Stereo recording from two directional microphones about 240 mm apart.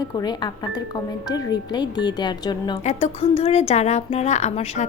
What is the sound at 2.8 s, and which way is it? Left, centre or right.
Speech, left.